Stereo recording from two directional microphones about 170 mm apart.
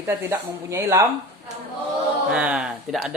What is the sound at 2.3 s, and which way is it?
Speech, 5° right (ahead or behind).